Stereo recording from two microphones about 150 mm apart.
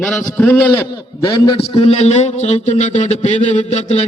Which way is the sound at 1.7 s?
40° left (ahead or behind).